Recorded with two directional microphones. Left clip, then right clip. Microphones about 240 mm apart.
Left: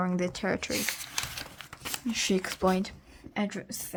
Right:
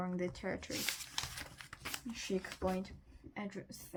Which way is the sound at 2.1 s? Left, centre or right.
Left.